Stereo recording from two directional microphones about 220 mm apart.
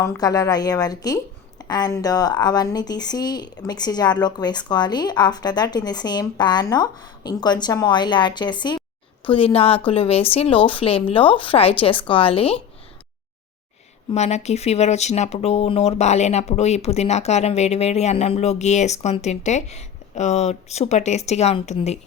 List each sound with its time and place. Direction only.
0.0 s a woman's voice: 15° left (ahead or behind)
14.1 s a woman's voice: 30° left (ahead or behind)